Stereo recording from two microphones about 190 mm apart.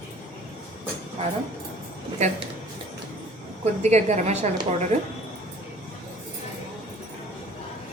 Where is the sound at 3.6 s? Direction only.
35° right (ahead or behind).